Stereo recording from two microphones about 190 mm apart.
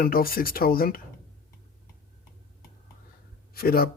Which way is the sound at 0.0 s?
50° left (ahead or behind).